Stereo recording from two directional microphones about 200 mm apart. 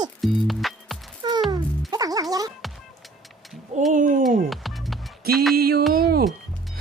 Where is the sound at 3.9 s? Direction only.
40° right (ahead or behind).